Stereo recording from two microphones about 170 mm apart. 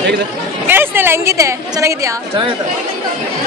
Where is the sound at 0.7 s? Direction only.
15° right (ahead or behind).